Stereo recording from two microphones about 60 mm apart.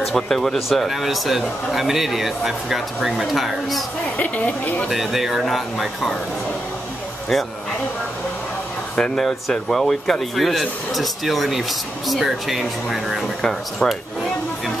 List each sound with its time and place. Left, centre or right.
0.0 s speech: centre
4.2 s speech: left
4.8 s speech: centre
8.9 s speech: centre
9.2 s speech: centre
13.4 s speech: centre